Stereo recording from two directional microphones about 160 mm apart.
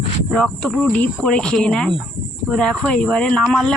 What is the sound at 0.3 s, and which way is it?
Speech, centre (ahead or behind).